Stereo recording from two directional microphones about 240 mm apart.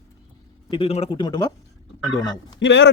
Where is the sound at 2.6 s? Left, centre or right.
Left.